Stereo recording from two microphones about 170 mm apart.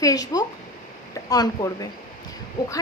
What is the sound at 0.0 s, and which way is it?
A woman's voice, 20° left (ahead or behind).